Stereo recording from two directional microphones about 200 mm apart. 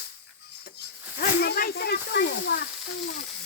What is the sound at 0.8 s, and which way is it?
Snake, 50° left (ahead or behind).